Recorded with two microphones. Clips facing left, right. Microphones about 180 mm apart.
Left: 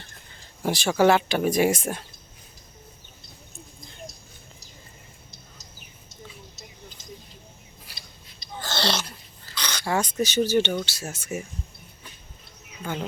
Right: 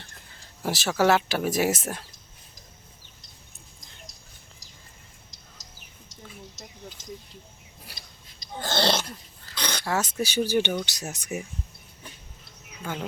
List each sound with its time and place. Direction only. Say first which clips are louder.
0.6 s speech: left 3 dB; centre (ahead or behind)
7.9 s a sound: even; 50° right (ahead or behind)
9.8 s speech: left 3 dB; 5° right (ahead or behind)